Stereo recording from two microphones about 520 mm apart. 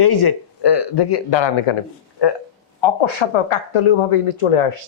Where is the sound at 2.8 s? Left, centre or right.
Left.